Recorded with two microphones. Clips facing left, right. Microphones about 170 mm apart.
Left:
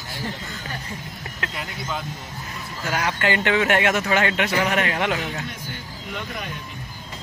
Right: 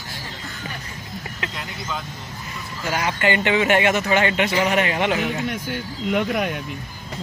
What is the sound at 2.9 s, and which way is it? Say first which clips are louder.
Speech: right 2 dB; 5° right (ahead or behind).